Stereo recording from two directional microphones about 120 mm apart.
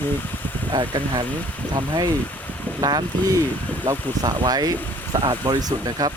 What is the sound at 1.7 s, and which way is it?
Speech, 30° right (ahead or behind).